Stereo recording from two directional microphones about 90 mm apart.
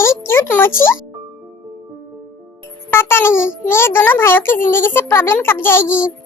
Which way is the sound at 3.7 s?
25° left (ahead or behind).